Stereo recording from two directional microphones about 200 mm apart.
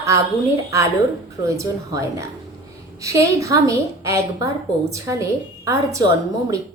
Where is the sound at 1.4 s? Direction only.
15° right (ahead or behind).